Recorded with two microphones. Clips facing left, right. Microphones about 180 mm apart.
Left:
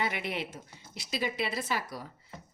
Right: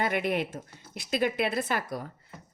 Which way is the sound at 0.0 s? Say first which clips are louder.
Right 6 dB; 50° right (ahead or behind).